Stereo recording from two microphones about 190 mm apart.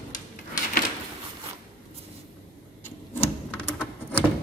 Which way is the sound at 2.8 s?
10° left (ahead or behind).